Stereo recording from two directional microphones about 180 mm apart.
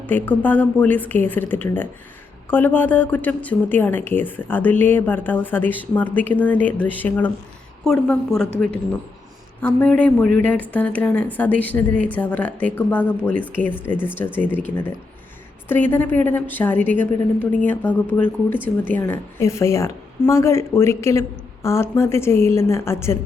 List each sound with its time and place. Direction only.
0.0 s a woman's voice: 10° left (ahead or behind)
14.3 s speech: 5° right (ahead or behind)
14.5 s speech: 10° left (ahead or behind)